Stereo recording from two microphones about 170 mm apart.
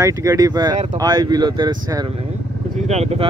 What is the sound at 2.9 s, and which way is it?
Speech, 40° right (ahead or behind).